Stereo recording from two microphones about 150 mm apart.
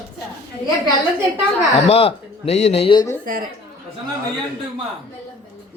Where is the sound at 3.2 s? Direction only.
65° right (ahead or behind).